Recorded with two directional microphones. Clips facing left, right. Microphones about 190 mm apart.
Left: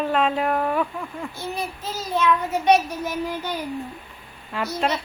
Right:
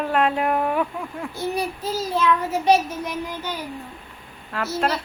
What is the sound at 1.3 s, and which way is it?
Speech, 35° right (ahead or behind).